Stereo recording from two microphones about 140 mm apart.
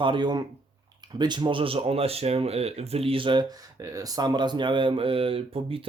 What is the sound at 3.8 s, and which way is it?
Speech, 25° right (ahead or behind).